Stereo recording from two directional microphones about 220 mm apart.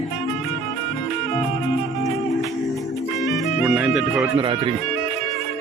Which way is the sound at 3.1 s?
Centre (ahead or behind).